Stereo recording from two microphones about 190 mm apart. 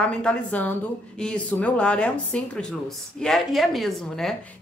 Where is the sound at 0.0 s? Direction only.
5° left (ahead or behind).